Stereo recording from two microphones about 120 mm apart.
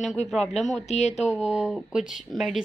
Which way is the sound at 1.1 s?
10° right (ahead or behind).